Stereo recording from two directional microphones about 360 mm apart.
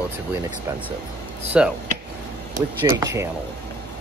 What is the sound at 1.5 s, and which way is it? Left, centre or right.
Speech, centre.